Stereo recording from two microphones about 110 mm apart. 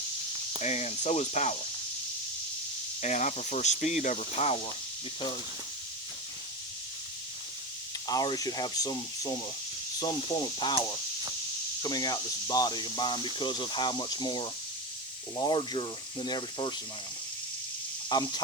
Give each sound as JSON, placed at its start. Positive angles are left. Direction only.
{"t": 0.6, "sound": "speech", "side_deg": 90}
{"t": 3.0, "sound": "speech", "side_deg": 90}
{"t": 8.0, "sound": "speech", "side_deg": 35}
{"t": 18.1, "sound": "speech", "side_deg": 40}